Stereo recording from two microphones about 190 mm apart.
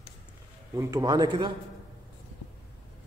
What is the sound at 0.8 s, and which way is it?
Speech, 20° right (ahead or behind).